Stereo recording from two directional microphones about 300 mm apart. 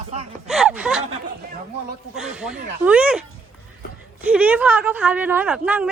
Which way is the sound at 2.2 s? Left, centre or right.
Centre.